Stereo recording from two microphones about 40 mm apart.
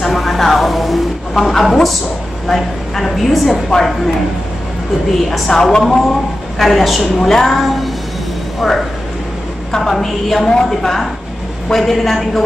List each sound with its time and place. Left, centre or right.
0.0 s vehicle: centre
2.4 s a woman's voice: centre
5.5 s a woman's voice: centre
6.6 s a woman's voice: centre